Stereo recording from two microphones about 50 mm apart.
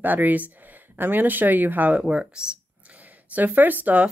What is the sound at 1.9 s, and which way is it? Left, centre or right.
Speech, centre.